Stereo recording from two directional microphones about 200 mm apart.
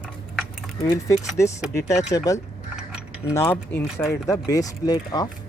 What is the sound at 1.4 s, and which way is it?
Speech, 15° left (ahead or behind).